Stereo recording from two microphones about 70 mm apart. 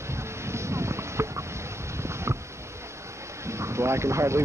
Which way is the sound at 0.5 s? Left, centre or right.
Right.